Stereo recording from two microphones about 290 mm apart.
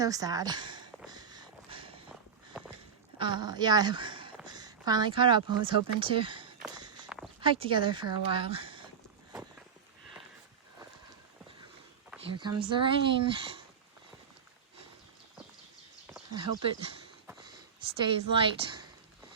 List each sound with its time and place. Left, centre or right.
0.0 s a sound: centre
2.5 s walk: centre
3.2 s speech: centre
6.7 s walk: centre
7.4 s speech: centre
12.3 s speech: centre
16.3 s speech: centre
18.0 s speech: centre